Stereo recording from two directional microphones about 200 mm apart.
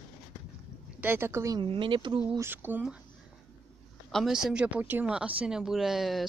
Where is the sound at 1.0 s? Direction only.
10° right (ahead or behind).